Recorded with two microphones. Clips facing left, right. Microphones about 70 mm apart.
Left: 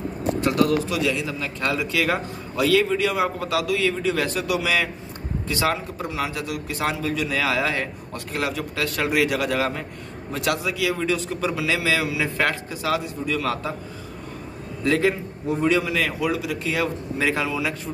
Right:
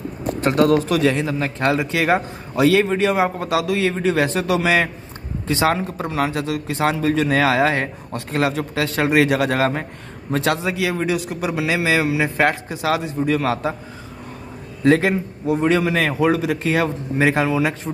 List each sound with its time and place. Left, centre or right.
0.4 s a man's voice: right
2.8 s a man's voice: right
3.1 s a man's voice: right
5.5 s a man's voice: right
5.8 s a man's voice: right
7.0 s a man's voice: right
8.5 s a man's voice: right
15.0 s a man's voice: right
15.5 s a man's voice: right